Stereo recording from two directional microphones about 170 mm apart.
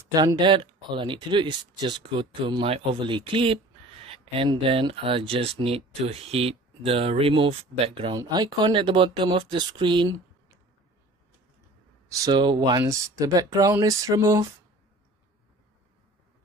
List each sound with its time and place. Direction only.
0.1 s speech: 25° right (ahead or behind)
8.2 s speech: 20° right (ahead or behind)
12.1 s speech: 25° right (ahead or behind)